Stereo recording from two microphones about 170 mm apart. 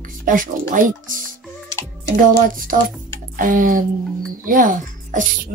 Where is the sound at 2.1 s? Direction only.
55° right (ahead or behind).